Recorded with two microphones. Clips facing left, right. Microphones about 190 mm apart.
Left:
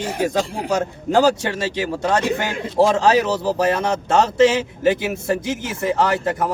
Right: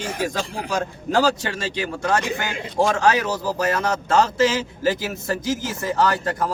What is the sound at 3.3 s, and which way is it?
Speech, 65° left (ahead or behind).